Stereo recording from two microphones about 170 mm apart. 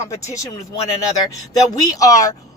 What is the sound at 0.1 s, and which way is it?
Speech, 20° left (ahead or behind).